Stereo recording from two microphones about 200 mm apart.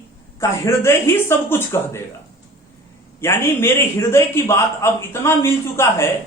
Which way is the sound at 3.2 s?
10° left (ahead or behind).